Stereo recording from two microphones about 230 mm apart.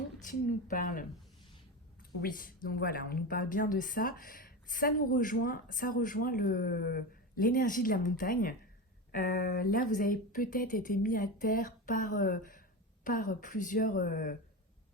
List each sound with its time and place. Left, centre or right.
0.2 s speech: left